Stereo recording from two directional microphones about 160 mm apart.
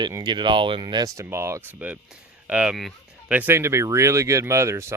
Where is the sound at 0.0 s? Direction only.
25° right (ahead or behind).